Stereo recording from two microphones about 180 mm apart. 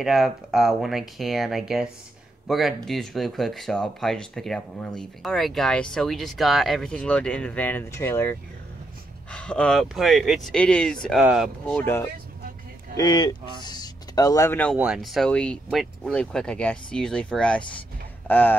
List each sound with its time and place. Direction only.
0.0 s speech: centre (ahead or behind)
11.6 s speech: 10° left (ahead or behind)
12.9 s speech: 25° left (ahead or behind)
14.8 s speech: centre (ahead or behind)